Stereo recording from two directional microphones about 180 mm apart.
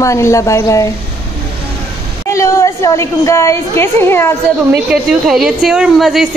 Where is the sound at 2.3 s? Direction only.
15° left (ahead or behind).